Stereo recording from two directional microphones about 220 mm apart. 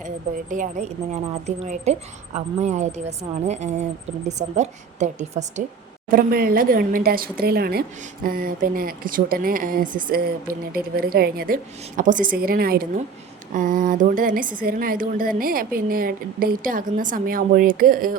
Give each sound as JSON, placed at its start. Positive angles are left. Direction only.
{"t": 0.5, "sound": "speech", "side_deg": -35}